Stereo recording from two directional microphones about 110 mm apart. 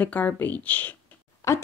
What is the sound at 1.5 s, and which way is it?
Speech, 25° left (ahead or behind).